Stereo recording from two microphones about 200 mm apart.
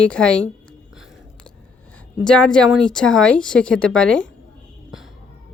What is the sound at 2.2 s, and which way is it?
Speech, 5° left (ahead or behind).